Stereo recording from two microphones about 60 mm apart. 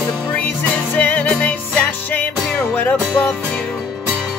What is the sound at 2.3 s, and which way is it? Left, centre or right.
Music, centre.